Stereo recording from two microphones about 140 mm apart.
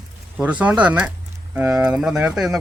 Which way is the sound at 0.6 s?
10° right (ahead or behind).